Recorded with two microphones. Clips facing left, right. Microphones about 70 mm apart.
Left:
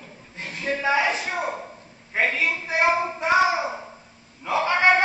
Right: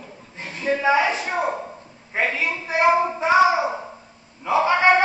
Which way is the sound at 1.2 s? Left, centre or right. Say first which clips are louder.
Right 4 dB; centre.